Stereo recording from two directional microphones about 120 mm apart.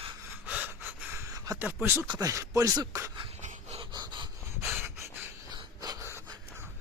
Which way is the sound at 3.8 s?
40° right (ahead or behind).